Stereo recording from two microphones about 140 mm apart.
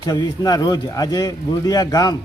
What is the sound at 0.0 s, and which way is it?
A man's voice, 30° left (ahead or behind).